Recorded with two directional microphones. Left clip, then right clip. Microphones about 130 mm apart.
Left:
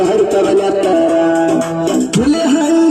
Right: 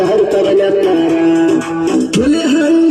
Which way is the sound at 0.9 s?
50° left (ahead or behind).